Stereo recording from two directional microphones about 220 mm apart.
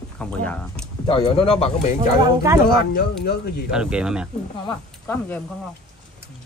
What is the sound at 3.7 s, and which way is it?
Speech, 5° right (ahead or behind).